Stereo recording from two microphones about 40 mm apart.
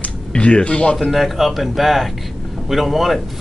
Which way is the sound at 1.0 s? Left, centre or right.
Centre.